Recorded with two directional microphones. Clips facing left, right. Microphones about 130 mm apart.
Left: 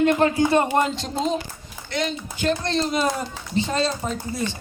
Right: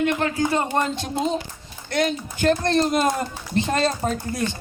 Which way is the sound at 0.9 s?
55° right (ahead or behind).